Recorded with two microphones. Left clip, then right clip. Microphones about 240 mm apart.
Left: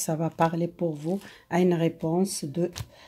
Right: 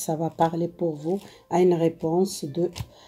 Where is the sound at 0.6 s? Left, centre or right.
Left.